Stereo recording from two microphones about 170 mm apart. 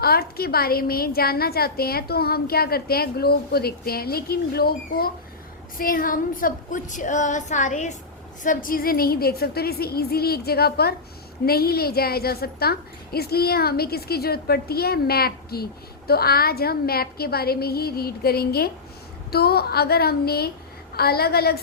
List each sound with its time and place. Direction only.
0.0 s a woman's voice: 65° left (ahead or behind)
5.7 s a sound: 55° left (ahead or behind)
8.4 s a woman's voice: 55° left (ahead or behind)